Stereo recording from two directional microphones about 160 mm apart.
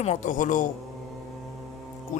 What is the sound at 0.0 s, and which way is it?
Speech, 45° left (ahead or behind).